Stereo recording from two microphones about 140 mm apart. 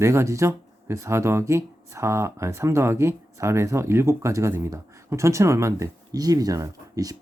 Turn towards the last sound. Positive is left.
turn(degrees=-25)  # may be behind; listen again after turning